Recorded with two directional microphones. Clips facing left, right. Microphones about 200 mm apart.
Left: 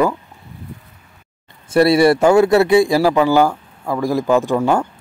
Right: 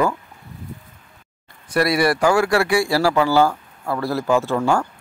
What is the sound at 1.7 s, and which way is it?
A man's voice, 25° left (ahead or behind).